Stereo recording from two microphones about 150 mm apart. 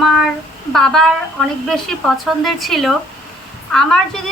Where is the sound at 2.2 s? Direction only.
Centre (ahead or behind).